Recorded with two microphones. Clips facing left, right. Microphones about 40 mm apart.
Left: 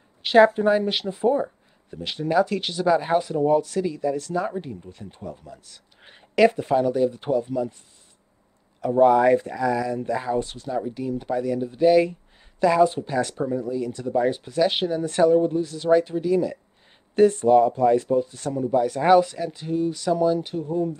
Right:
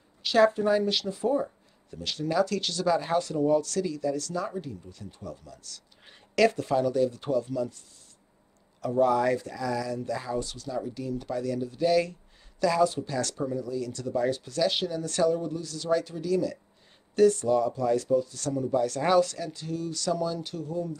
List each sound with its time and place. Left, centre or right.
0.2 s speech: left
8.9 s speech: left